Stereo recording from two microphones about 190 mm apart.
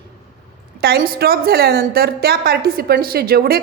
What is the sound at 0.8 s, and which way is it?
A woman's voice, 55° right (ahead or behind).